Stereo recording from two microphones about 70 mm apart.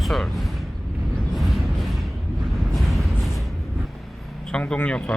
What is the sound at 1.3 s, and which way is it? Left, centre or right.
Music, centre.